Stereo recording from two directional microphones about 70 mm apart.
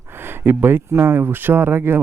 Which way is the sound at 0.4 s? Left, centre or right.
Right.